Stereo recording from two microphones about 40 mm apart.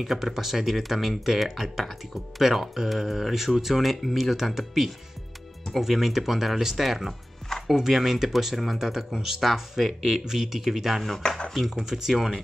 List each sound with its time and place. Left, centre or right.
0.0 s speech: centre
11.1 s speech: centre
11.7 s speech: centre